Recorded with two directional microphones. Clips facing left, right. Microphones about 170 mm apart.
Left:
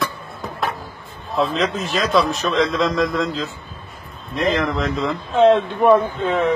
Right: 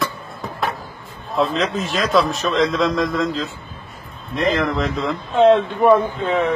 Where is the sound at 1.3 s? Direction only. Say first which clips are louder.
Even; centre (ahead or behind).